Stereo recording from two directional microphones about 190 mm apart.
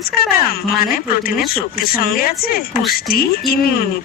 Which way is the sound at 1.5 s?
50° left (ahead or behind).